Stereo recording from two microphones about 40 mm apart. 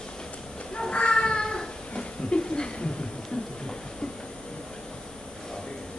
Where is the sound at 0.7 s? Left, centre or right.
Left.